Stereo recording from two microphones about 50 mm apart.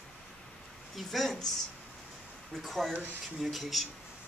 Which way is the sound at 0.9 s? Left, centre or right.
Centre.